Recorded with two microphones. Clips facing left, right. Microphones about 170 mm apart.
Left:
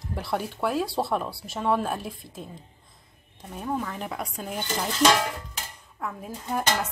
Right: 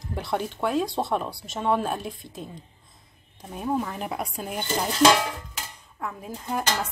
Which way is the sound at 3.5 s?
15° right (ahead or behind).